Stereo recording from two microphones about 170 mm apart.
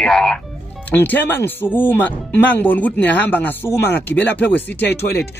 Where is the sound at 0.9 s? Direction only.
10° left (ahead or behind).